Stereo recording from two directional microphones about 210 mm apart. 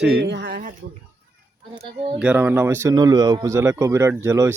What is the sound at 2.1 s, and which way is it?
Speech, 5° right (ahead or behind).